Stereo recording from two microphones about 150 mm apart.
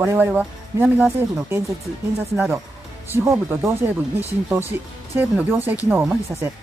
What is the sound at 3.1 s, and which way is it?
Speech, 20° right (ahead or behind).